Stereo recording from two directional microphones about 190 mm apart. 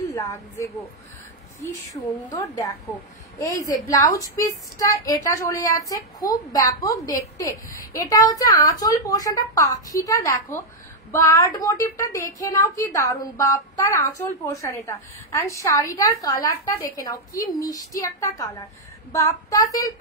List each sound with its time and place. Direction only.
0.1 s a woman's voice: 15° left (ahead or behind)
2.3 s a woman's voice: 15° left (ahead or behind)
19.1 s child singing: 20° left (ahead or behind)